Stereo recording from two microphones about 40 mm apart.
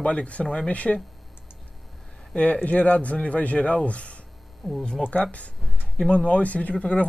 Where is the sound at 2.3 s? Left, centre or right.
Left.